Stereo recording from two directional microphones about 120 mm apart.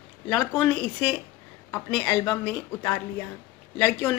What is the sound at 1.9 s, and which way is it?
Speech, 25° left (ahead or behind).